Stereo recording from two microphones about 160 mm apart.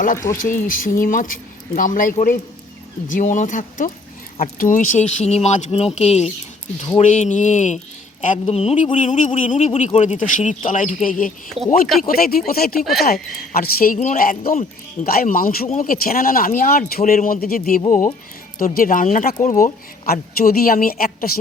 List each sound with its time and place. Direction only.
0.3 s speech: 55° left (ahead or behind)
12.8 s speech: centre (ahead or behind)
13.5 s speech: 65° left (ahead or behind)